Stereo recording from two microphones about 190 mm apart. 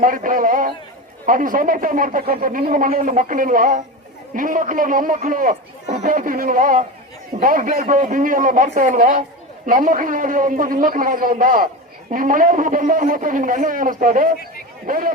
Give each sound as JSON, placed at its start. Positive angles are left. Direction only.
{"t": 0.0, "sound": "speech", "side_deg": -45}